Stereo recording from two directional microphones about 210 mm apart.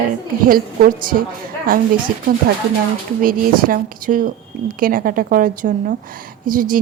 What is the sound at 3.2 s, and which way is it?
A woman's voice, 40° right (ahead or behind).